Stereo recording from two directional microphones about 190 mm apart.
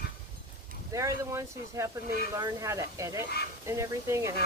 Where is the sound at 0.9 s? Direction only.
15° right (ahead or behind).